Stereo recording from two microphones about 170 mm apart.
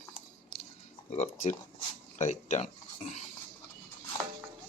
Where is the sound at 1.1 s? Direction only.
45° left (ahead or behind).